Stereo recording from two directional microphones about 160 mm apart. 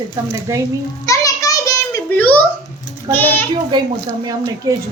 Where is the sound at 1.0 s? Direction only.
20° left (ahead or behind).